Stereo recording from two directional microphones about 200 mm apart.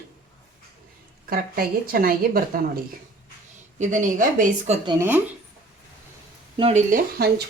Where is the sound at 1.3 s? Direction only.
45° right (ahead or behind).